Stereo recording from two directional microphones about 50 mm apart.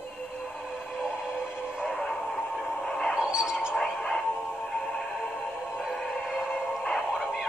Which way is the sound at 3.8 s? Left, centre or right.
Centre.